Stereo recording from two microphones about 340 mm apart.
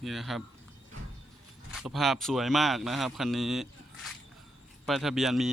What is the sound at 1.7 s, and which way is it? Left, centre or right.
Speech, centre.